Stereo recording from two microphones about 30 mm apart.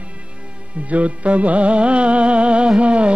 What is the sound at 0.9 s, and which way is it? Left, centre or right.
Music, right.